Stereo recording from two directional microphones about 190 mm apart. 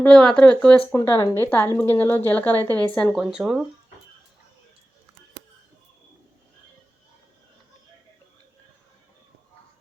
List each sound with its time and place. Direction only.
0.0 s speech: 5° left (ahead or behind)
0.9 s a woman's voice: 15° left (ahead or behind); by 3.6 s centre (ahead or behind)